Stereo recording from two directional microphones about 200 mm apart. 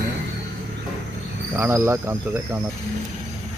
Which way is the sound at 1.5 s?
10° right (ahead or behind).